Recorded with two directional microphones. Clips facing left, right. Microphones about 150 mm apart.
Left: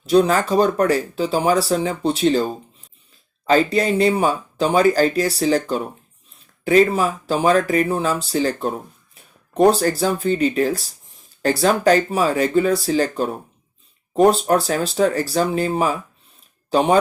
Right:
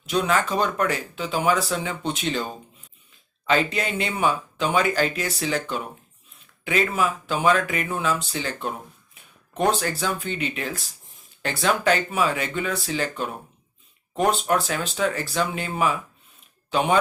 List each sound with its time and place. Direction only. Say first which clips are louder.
0.0 s speech: left 7 dB; 35° left (ahead or behind)